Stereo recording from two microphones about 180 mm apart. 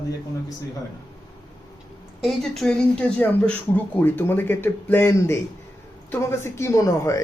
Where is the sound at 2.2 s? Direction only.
Centre (ahead or behind).